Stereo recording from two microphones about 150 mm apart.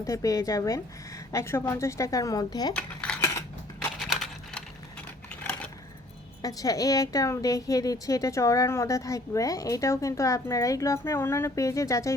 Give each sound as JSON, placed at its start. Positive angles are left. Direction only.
{"t": 0.0, "sound": "a woman's voice", "side_deg": 20}
{"t": 2.7, "sound": "coin", "side_deg": 10}
{"t": 3.8, "sound": "a sound", "side_deg": 0}
{"t": 6.4, "sound": "a woman's voice", "side_deg": 25}